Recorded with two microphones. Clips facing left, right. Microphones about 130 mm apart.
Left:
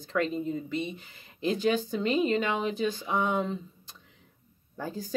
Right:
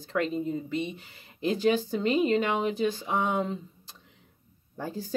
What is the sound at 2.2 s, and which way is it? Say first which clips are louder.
Speech: right 2 dB; 30° right (ahead or behind).